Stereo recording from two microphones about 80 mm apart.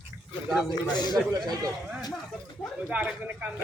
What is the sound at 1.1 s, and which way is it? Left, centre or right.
Speech, right.